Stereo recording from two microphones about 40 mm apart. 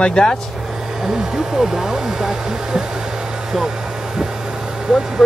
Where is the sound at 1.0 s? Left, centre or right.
Centre.